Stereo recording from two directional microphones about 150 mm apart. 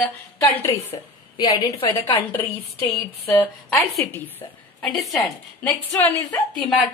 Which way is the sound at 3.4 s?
10° left (ahead or behind).